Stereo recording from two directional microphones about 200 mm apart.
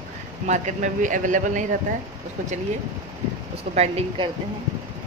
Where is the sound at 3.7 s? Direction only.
30° right (ahead or behind).